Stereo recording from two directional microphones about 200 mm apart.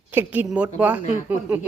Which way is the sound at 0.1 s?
10° right (ahead or behind).